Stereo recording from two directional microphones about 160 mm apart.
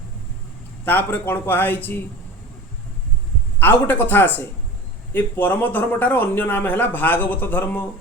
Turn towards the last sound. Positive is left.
turn(degrees=10)  # may be behind; listen again after turning